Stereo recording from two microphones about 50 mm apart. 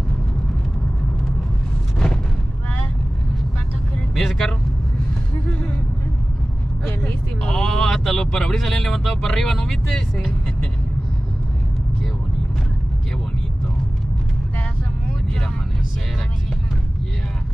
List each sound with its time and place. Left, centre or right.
4.1 s speech: centre
7.4 s speech: centre